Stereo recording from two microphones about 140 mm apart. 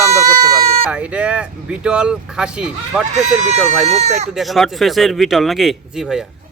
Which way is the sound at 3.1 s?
55° right (ahead or behind).